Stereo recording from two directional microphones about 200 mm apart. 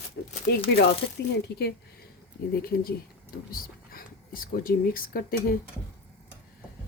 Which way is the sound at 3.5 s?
45° left (ahead or behind).